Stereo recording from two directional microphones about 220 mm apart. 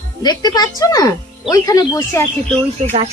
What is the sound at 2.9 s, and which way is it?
Speech, 30° right (ahead or behind).